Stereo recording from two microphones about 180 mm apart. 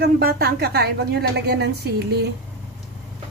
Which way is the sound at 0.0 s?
55° right (ahead or behind).